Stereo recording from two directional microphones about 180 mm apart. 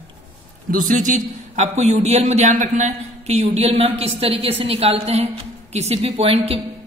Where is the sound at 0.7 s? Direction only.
50° right (ahead or behind).